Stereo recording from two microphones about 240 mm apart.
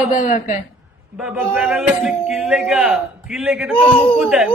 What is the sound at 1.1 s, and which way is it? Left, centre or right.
Speech, centre.